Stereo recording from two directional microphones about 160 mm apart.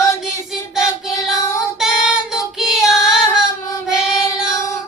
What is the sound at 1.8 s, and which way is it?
Child singing, 5° right (ahead or behind).